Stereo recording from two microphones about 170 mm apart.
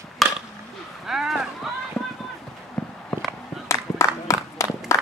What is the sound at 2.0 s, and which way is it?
Run, 15° left (ahead or behind).